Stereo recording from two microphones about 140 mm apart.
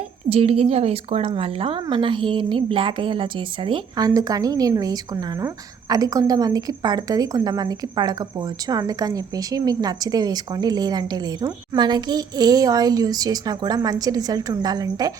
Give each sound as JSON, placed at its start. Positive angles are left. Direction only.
{"t": 0.3, "sound": "a woman's voice", "side_deg": -45}